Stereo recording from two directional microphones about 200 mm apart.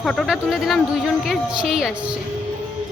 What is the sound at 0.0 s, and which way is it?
A woman's voice, centre (ahead or behind).